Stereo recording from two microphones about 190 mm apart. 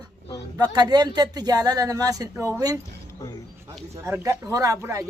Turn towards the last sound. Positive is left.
turn(degrees=-15)  # may be behind; listen again after turning